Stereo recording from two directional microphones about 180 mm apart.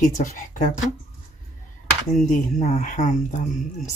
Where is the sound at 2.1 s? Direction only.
45° left (ahead or behind).